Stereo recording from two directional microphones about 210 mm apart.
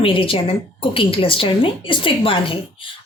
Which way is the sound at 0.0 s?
25° left (ahead or behind).